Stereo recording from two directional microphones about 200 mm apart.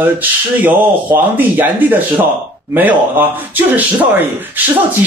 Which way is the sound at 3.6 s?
10° right (ahead or behind).